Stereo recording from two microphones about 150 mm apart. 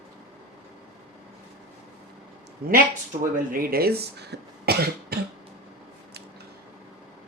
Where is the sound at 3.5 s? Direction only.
80° right.